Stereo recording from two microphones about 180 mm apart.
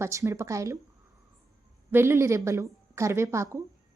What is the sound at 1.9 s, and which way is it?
A woman's voice, 15° right (ahead or behind).